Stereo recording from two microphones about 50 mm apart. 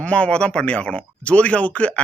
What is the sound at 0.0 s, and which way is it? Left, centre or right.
Speech, left.